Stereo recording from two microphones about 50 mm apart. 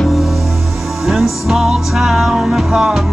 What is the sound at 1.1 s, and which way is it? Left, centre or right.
Music, centre.